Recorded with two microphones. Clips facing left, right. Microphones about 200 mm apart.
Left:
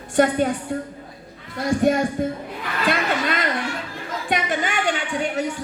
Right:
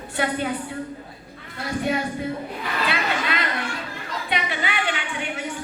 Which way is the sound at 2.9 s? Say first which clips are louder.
Left 6 dB; 45° left (ahead or behind).